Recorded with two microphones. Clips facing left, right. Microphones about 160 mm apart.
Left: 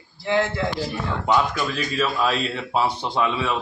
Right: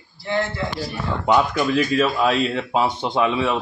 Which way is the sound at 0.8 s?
10° right (ahead or behind).